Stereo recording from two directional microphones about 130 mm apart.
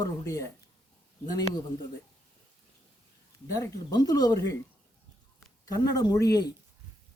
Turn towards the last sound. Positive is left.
turn(degrees=30)  # may be behind; listen again after turning